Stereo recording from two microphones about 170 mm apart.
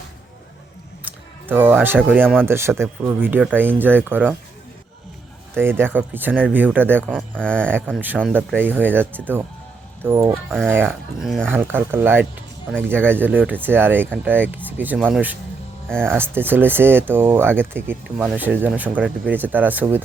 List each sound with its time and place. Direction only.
1.0 s a sound: 10° right (ahead or behind)
2.0 s speech: 10° right (ahead or behind)
5.5 s speech: 15° right (ahead or behind)
7.1 s speech: 5° left (ahead or behind)
8.5 s speech: 10° right (ahead or behind)
11.5 s speech: 10° right (ahead or behind)